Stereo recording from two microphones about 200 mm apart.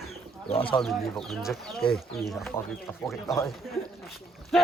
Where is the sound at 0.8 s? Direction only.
Centre (ahead or behind).